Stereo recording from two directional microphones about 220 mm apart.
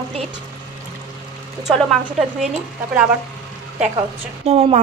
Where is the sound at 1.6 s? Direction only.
Centre (ahead or behind).